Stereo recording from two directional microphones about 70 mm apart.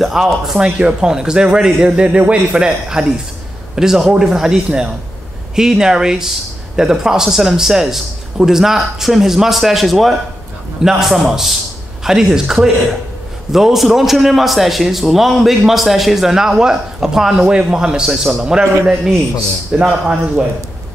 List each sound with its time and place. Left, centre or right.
0.0 s a man's voice: centre